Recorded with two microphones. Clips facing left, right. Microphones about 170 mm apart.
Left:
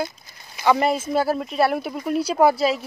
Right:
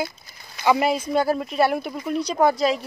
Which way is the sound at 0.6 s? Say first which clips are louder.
Left 1 dB; 5° right (ahead or behind).